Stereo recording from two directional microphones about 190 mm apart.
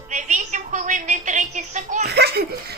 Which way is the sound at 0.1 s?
40° right (ahead or behind).